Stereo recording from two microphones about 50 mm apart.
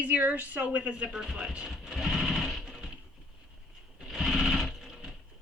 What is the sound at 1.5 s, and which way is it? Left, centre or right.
Sewing machine, centre.